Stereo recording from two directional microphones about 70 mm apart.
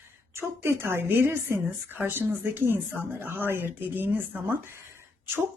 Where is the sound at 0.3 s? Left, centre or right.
Right.